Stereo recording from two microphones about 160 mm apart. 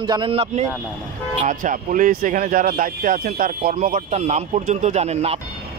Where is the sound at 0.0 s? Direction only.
30° right (ahead or behind).